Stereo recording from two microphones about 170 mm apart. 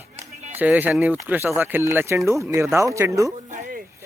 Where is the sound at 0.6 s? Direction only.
10° right (ahead or behind).